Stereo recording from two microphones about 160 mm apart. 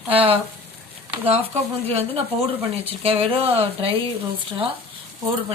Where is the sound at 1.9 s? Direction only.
40° right (ahead or behind).